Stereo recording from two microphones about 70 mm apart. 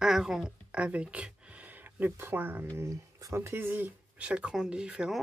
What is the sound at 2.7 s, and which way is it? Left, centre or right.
Speech, right.